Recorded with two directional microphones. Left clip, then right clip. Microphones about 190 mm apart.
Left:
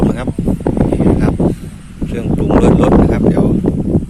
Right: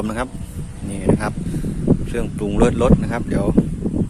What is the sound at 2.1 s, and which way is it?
Speech, centre (ahead or behind).